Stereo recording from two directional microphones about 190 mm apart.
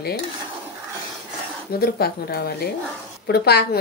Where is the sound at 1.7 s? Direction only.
55° left (ahead or behind).